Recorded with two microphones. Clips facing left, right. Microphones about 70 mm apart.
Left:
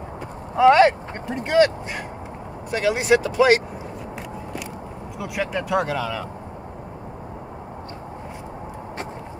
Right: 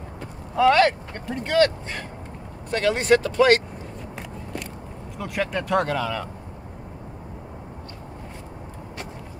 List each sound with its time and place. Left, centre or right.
0.6 s speech: left
5.2 s speech: centre